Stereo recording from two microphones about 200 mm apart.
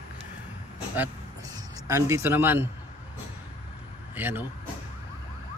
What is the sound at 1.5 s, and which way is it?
Speech, 15° right (ahead or behind).